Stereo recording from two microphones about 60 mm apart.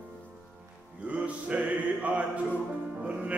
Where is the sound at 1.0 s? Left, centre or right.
Right.